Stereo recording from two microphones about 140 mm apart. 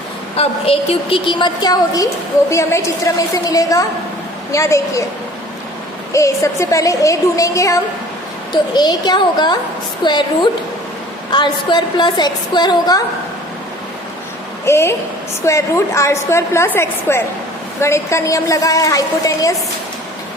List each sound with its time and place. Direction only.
0.3 s a woman's voice: 45° left (ahead or behind); by 5.0 s 20° left (ahead or behind)
6.1 s a woman's voice: 20° left (ahead or behind)
14.6 s a woman's voice: 20° left (ahead or behind)